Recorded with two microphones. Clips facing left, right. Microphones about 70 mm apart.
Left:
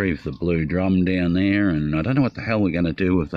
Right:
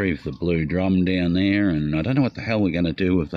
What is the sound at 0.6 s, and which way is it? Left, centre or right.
Speech, centre.